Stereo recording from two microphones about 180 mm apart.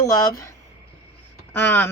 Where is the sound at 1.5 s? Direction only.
10° left (ahead or behind).